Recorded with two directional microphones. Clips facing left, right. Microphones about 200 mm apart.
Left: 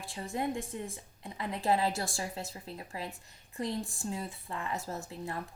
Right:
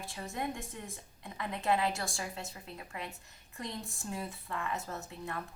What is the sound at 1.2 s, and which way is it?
A woman's voice, 30° left (ahead or behind).